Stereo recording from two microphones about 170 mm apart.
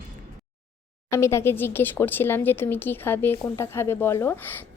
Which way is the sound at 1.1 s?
15° left (ahead or behind).